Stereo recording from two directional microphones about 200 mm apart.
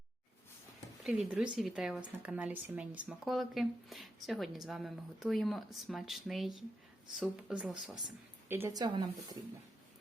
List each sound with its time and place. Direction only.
1.0 s a woman's voice: centre (ahead or behind); by 9.4 s 20° right (ahead or behind)